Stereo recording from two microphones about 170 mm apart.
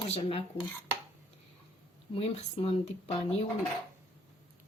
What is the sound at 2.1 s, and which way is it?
Speech, 35° left (ahead or behind).